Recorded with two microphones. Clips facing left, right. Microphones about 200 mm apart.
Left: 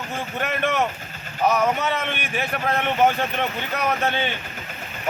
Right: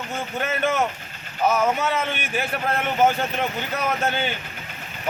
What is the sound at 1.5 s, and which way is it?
A man's voice, 5° right (ahead or behind).